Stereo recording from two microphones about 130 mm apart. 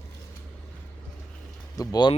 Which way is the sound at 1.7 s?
30° left (ahead or behind).